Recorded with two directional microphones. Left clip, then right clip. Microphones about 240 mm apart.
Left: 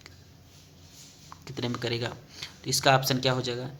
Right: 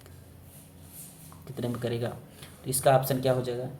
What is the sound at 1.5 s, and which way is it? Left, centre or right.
Speech, centre.